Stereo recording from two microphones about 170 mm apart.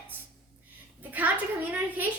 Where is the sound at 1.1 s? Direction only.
10° right (ahead or behind).